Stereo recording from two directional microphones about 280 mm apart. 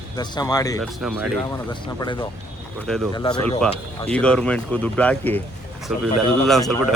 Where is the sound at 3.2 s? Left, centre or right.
Centre.